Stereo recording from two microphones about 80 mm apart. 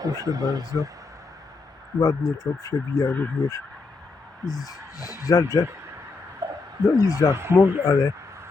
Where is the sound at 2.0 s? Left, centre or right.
Left.